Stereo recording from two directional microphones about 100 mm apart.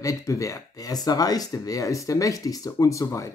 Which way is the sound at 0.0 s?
35° left (ahead or behind).